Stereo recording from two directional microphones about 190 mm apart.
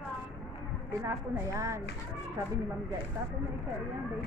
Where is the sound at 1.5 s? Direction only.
15° right (ahead or behind).